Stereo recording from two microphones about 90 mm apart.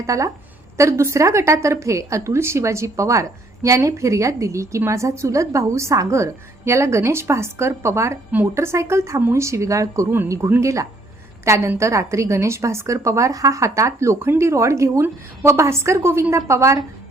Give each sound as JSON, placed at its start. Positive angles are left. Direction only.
{"t": 0.0, "sound": "a woman's voice", "side_deg": -35}